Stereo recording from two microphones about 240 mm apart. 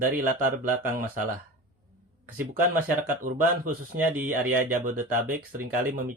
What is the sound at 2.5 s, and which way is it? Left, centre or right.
Speech, right.